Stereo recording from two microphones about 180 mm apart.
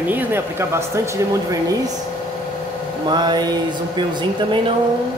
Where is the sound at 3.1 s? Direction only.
25° right (ahead or behind).